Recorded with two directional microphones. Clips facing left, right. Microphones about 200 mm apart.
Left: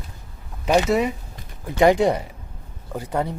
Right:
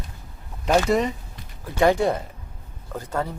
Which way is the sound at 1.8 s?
15° left (ahead or behind).